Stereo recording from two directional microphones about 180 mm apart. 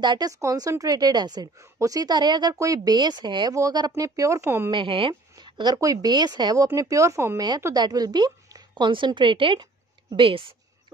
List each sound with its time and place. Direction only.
0.0 s a woman's voice: 25° right (ahead or behind)
4.6 s a woman's voice: 30° right (ahead or behind)